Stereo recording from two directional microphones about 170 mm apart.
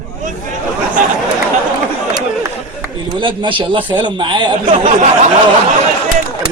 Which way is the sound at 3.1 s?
30° right (ahead or behind).